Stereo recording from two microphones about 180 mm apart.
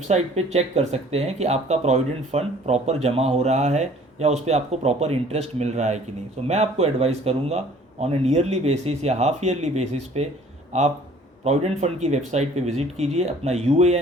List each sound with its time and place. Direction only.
0.1 s speech: 35° right (ahead or behind)